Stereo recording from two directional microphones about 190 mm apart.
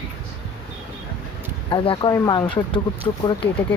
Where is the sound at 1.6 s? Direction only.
25° left (ahead or behind).